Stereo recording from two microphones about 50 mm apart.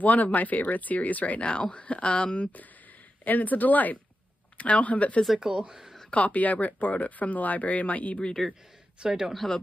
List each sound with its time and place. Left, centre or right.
0.0 s speech: left
5.4 s speech: centre
6.0 s speech: left
8.3 s speech: centre
9.0 s speech: centre
9.3 s speech: centre